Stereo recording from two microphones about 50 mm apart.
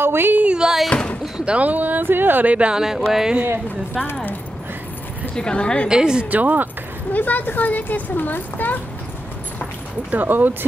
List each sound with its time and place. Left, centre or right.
0.0 s music: right
0.8 s slam: left
1.4 s speech: right
2.5 s speech: right
2.8 s music: centre
4.0 s speech: left
5.3 s speech: centre
5.9 s music: centre
6.3 s speech: right
7.1 s speech: left
10.1 s speech: right